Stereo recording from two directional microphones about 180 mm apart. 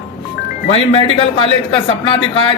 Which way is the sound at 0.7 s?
35° left (ahead or behind).